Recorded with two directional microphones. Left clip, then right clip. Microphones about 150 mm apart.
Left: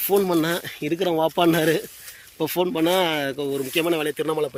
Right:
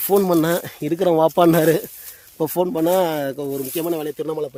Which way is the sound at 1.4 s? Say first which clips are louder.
Right 4 dB; 75° right (ahead or behind).